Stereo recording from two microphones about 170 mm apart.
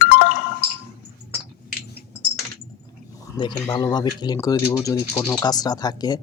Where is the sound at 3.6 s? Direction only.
25° left (ahead or behind).